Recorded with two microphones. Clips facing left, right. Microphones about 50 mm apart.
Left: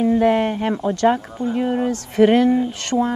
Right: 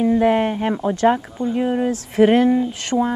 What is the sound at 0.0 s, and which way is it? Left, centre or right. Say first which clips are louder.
Speech: even; centre.